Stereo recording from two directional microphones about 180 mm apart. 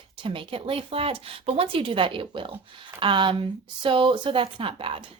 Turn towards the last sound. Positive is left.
turn(degrees=-30)  # may be behind; listen again after turning